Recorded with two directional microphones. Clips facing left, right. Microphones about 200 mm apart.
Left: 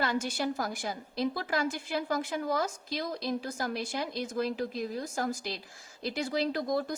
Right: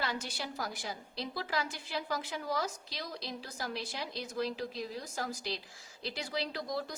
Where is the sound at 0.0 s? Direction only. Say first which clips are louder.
Left 8 dB; 50° left (ahead or behind).